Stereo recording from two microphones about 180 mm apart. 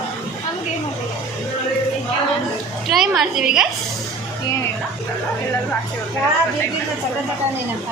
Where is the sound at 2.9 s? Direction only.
Centre (ahead or behind).